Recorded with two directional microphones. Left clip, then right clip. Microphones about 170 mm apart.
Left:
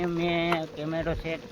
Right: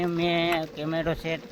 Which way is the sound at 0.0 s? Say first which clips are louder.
Right 2 dB; 20° right (ahead or behind).